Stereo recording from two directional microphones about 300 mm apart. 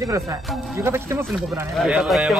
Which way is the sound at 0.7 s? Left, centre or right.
Centre.